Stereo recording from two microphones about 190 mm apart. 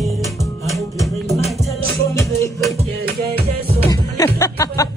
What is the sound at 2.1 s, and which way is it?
Music, 15° left (ahead or behind).